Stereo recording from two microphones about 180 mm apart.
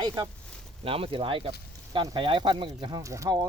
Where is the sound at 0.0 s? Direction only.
25° right (ahead or behind).